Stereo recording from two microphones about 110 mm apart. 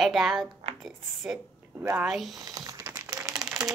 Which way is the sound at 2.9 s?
30° right (ahead or behind).